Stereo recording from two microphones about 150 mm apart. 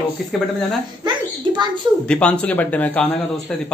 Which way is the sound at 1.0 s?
30° right (ahead or behind).